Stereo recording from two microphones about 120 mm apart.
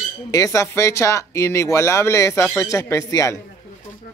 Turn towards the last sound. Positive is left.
turn(degrees=25)  # may be behind; listen again after turning